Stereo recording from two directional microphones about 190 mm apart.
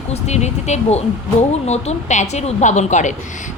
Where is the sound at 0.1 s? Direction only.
35° left (ahead or behind).